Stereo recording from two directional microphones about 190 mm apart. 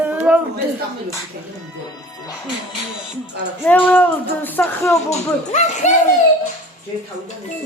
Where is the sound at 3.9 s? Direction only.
10° left (ahead or behind).